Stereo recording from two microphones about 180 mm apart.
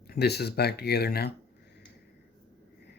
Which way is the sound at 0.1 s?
65° left (ahead or behind).